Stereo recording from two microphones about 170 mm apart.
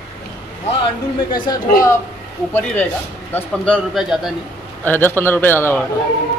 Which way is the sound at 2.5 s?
15° left (ahead or behind).